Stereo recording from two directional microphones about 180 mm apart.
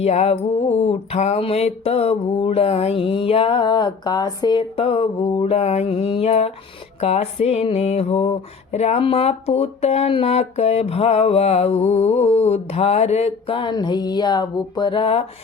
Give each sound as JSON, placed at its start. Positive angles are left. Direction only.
{"t": 0.0, "sound": "music", "side_deg": 35}